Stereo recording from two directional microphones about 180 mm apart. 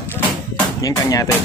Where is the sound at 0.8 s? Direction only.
20° left (ahead or behind).